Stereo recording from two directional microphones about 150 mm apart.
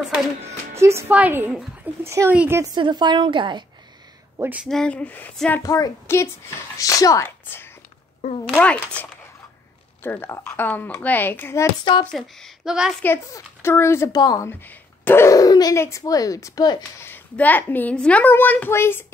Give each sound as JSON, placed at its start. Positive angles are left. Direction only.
{"t": 0.7, "sound": "a woman's voice", "side_deg": -20}
{"t": 2.6, "sound": "a woman's voice", "side_deg": -30}
{"t": 4.4, "sound": "a woman's voice", "side_deg": -10}
{"t": 4.6, "sound": "a child's voice", "side_deg": 5}
{"t": 5.6, "sound": "a woman's voice", "side_deg": 20}
{"t": 10.0, "sound": "a child's voice", "side_deg": 15}
{"t": 12.1, "sound": "speech", "side_deg": 5}
{"t": 13.0, "sound": "a child's voice", "side_deg": 15}
{"t": 14.5, "sound": "speech", "side_deg": 15}
{"t": 17.0, "sound": "a child's voice", "side_deg": 10}